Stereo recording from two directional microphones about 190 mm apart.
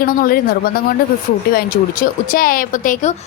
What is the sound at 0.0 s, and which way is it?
A woman's voice, 50° left (ahead or behind).